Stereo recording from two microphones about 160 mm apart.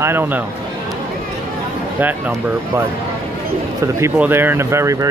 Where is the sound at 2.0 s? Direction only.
10° right (ahead or behind).